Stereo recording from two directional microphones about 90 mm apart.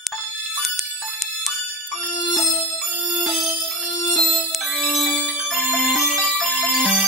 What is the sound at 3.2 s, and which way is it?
Music, centre (ahead or behind).